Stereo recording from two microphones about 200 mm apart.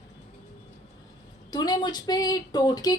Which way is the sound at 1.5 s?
20° left (ahead or behind).